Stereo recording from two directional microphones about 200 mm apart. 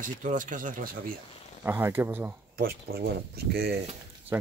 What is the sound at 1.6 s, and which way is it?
Speech, 10° right (ahead or behind).